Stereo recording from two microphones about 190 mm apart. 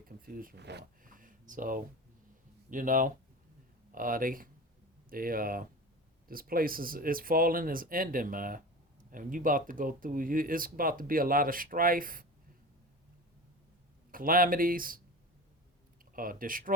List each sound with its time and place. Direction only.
0.3 s speech: 50° right (ahead or behind)
14.1 s speech: 50° right (ahead or behind)
16.1 s speech: 45° right (ahead or behind)